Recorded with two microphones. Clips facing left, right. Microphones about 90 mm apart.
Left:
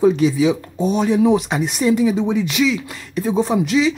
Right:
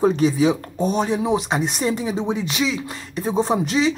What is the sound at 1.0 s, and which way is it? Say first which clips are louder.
Speech: left 5 dB; 25° right (ahead or behind).